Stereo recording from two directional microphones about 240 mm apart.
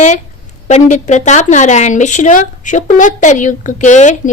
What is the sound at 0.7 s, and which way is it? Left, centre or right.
A woman's voice, left.